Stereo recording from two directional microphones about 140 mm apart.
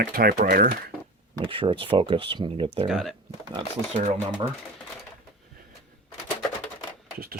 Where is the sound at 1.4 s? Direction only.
40° right (ahead or behind).